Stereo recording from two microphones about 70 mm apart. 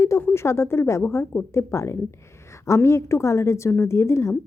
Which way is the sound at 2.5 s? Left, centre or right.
Left.